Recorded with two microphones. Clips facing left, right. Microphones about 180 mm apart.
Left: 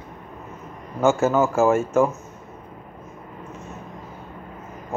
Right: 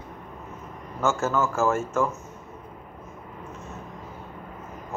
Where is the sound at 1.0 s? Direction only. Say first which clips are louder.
Left 6 dB; 15° left (ahead or behind).